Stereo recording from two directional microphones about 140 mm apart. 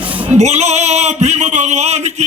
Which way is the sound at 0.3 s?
55° right (ahead or behind).